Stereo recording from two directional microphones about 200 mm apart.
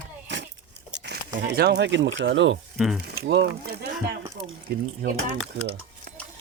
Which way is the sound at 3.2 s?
55° right (ahead or behind).